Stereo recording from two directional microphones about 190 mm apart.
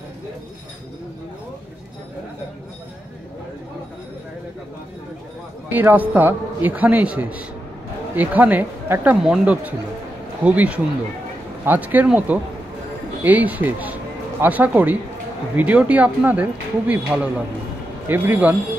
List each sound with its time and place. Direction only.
5.7 s a man's voice: 10° right (ahead or behind)